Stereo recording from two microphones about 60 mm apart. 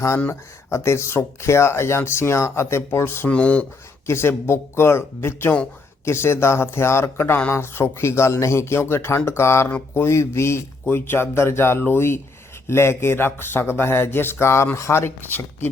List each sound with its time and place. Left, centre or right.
0.3 s speech: left
3.2 s speech: left
4.0 s speech: left
10.8 s speech: left